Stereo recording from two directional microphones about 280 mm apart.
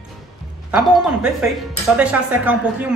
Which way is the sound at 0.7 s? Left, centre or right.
Centre.